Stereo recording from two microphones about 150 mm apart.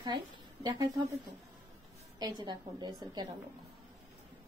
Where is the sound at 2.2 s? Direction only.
30° right (ahead or behind).